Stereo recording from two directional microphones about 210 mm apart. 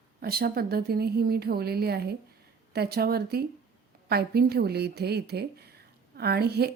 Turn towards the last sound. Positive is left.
turn(degrees=-50)  # may be behind; listen again after turning